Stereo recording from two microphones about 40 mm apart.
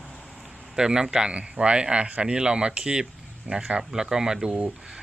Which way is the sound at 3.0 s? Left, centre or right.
Centre.